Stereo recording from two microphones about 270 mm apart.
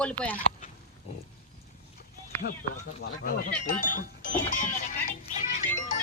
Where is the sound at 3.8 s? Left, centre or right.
Left.